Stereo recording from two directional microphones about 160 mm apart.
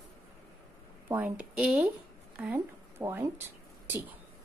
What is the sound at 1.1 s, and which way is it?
A woman's voice, 10° right (ahead or behind).